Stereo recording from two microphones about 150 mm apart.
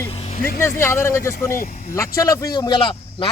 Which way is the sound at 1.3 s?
60° left (ahead or behind).